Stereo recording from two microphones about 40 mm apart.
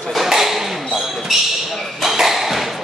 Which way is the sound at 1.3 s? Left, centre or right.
Centre.